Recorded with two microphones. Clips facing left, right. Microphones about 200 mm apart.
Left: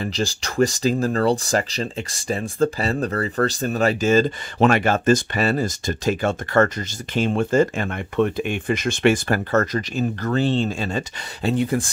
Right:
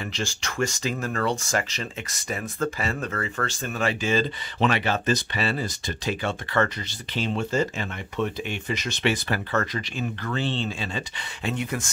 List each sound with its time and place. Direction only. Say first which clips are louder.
0.0 s speech: left 6 dB; 35° left (ahead or behind)